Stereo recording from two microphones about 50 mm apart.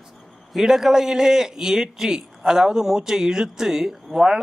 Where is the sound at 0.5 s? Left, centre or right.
Centre.